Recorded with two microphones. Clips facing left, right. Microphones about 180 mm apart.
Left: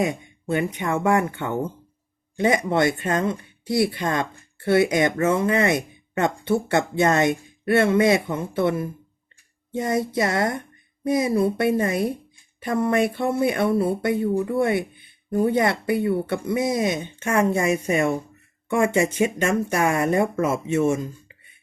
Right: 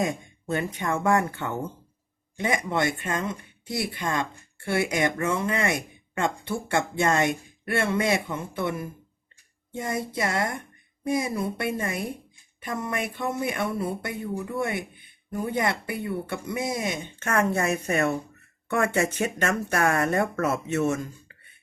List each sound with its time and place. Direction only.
0.4 s speech: 15° left (ahead or behind)
0.9 s speech: 25° left (ahead or behind)
17.2 s speech: 15° left (ahead or behind)